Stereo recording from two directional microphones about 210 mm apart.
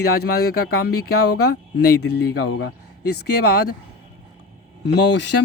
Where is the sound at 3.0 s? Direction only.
50° left (ahead or behind).